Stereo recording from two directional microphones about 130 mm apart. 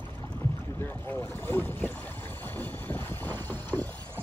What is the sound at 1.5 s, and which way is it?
Speech, 15° left (ahead or behind).